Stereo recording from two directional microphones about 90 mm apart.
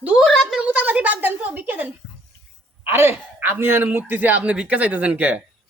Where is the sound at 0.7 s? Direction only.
15° right (ahead or behind).